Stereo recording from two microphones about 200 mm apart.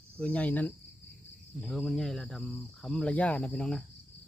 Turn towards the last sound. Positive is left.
turn(degrees=5)  # may be behind; listen again after turning